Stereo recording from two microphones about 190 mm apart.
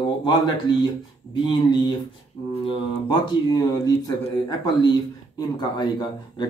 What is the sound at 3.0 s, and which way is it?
Speech, 25° left (ahead or behind).